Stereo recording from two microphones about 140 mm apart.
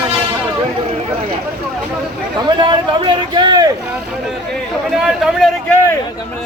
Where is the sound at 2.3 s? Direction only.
30° right (ahead or behind).